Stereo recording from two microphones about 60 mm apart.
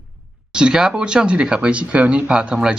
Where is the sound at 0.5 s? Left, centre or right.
Centre.